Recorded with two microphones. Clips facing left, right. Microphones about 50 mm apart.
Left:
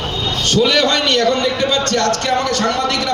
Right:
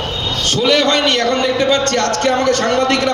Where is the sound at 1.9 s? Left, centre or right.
Right.